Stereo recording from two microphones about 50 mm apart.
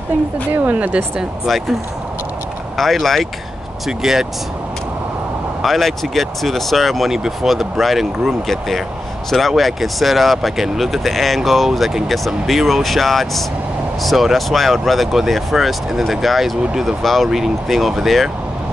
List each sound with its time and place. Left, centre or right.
0.6 s speech: right
2.8 s speech: centre
3.8 s speech: centre
5.6 s speech: centre